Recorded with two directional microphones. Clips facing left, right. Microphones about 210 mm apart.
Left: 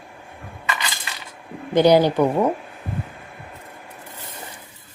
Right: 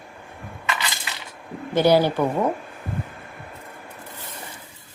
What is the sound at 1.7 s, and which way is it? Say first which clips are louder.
Speech: left 3 dB; 15° left (ahead or behind).